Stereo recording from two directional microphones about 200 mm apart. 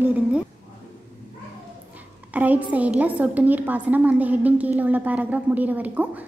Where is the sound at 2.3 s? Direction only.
5° right (ahead or behind).